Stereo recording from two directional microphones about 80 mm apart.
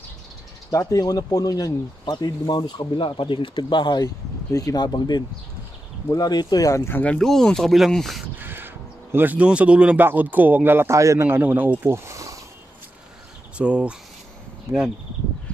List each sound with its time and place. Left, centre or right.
0.7 s speech: left
4.0 s speech: left
6.8 s speech: left
7.2 s speech: centre
8.4 s crow: right
10.0 s speech: right
11.0 s a man's voice: right
11.2 s speech: right
12.1 s a sound: right
13.6 s speech: centre